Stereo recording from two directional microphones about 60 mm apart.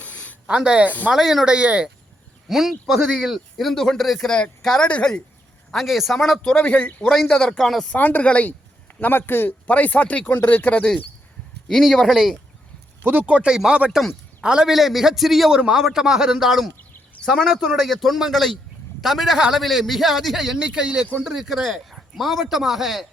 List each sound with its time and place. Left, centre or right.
0.0 s a sound: left
0.4 s a man's voice: centre
1.5 s a man's voice: centre
2.5 s a man's voice: centre; by 5.2 s left
5.7 s speech: centre
6.4 s speech: centre
7.0 s a man's voice: centre
7.9 s speech: left
9.0 s speech: left
11.7 s speech: centre
13.0 s speech: right
13.5 s a man's voice: centre
21.2 s speech: centre